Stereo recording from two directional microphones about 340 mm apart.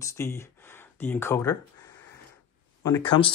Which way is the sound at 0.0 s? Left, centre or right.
Centre.